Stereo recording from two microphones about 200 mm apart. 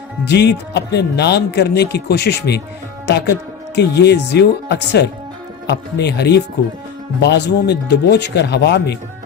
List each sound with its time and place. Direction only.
0.3 s speech: 60° left (ahead or behind)